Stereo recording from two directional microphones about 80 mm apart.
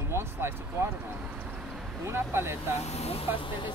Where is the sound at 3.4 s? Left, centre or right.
Left.